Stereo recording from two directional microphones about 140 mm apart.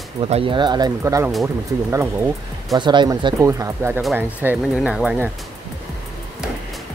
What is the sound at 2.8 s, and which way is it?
Speech, 35° right (ahead or behind).